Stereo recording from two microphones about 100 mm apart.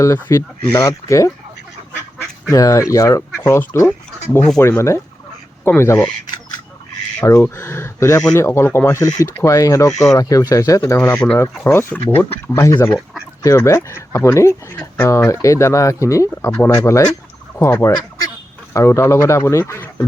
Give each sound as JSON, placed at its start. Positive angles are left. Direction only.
{"t": 0.0, "sound": "speech", "side_deg": 30}
{"t": 2.5, "sound": "a man's voice", "side_deg": 30}
{"t": 7.2, "sound": "a man's voice", "side_deg": 30}
{"t": 9.0, "sound": "a man's voice", "side_deg": 35}
{"t": 16.5, "sound": "speech", "side_deg": 15}
{"t": 16.7, "sound": "a man's voice", "side_deg": 35}